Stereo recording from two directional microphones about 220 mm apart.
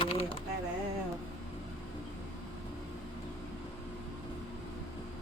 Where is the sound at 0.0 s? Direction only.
25° left (ahead or behind).